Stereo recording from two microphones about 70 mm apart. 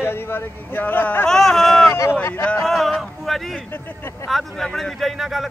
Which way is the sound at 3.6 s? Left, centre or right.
Left.